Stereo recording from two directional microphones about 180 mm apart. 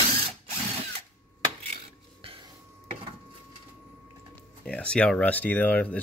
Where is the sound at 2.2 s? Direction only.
30° right (ahead or behind).